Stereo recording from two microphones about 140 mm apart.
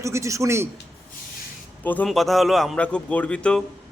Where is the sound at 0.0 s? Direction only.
20° right (ahead or behind).